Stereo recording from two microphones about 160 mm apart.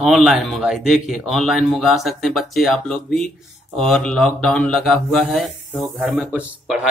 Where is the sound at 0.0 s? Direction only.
Centre (ahead or behind).